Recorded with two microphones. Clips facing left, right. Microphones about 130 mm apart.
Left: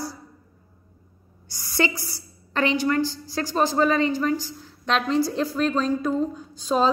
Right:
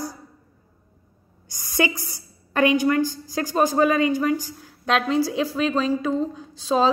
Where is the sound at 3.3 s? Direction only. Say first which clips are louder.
Right 2 dB; 15° right (ahead or behind).